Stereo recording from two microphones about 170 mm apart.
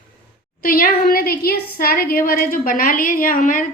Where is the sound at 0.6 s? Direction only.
55° left (ahead or behind).